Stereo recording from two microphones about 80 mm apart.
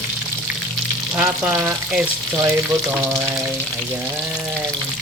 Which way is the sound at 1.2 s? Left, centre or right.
Right.